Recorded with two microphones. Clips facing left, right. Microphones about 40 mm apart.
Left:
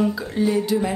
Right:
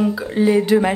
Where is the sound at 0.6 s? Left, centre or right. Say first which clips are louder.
Right 6 dB; right.